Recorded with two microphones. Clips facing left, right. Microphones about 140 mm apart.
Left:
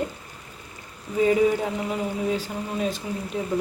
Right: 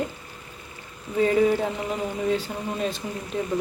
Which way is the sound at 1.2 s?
10° left (ahead or behind).